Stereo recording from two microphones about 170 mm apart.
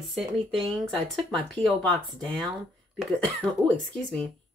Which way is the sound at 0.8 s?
5° left (ahead or behind).